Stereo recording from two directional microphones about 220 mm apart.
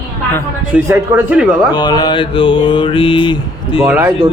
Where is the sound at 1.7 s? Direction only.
20° left (ahead or behind).